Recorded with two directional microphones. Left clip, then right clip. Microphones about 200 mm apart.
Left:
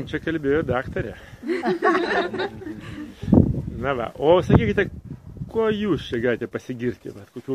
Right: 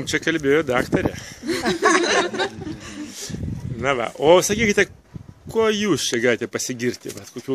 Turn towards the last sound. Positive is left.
turn(degrees=-5)  # may be behind; listen again after turning